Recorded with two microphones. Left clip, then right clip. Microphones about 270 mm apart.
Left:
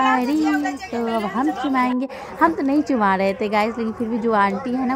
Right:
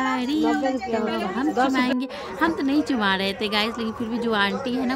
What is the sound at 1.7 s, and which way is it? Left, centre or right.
Speech, centre.